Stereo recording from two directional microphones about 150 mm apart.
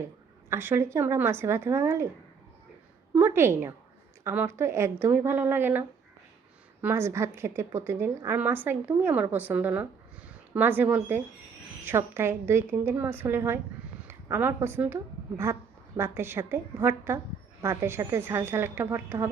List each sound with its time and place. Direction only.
0.5 s a woman's voice: 15° right (ahead or behind)
3.2 s a woman's voice: 15° right (ahead or behind)
6.8 s a woman's voice: 15° right (ahead or behind)